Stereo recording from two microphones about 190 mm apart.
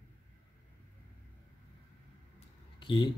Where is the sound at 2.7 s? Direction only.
25° left (ahead or behind).